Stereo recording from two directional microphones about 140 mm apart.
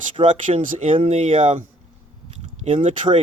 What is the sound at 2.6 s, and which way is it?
Speech, 45° right (ahead or behind).